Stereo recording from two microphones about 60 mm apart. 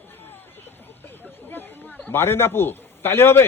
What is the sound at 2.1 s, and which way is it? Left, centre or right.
Speech, left.